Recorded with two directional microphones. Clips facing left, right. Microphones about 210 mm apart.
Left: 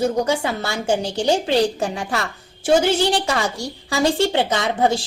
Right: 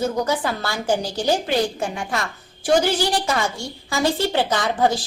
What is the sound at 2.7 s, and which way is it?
A woman's voice, 25° left (ahead or behind).